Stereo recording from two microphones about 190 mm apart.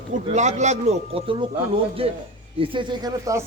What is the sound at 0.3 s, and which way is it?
A man's voice, 40° right (ahead or behind).